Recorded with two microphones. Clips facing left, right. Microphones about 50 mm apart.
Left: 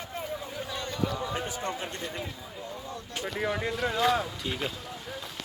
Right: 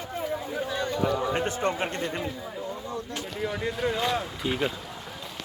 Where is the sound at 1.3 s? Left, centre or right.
Right.